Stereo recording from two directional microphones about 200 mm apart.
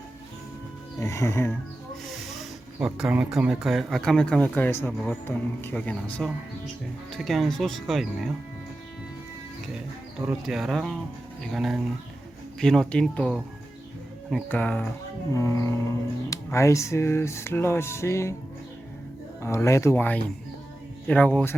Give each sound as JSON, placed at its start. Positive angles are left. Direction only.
{"t": 0.9, "sound": "speech", "side_deg": 15}
{"t": 2.0, "sound": "speech", "side_deg": 0}
{"t": 10.2, "sound": "speech", "side_deg": -5}
{"t": 19.4, "sound": "speech", "side_deg": 15}